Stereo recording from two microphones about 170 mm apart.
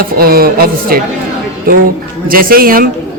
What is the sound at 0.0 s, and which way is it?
Speech, 60° right (ahead or behind).